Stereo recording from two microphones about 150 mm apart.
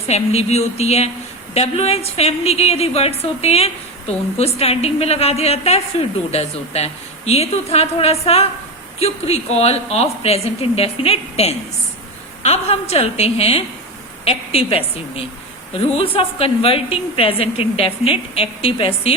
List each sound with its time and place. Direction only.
0.1 s a woman's voice: 45° left (ahead or behind)